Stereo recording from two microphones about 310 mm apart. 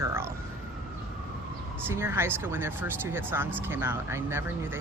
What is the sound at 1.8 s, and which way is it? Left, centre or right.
Speech, centre.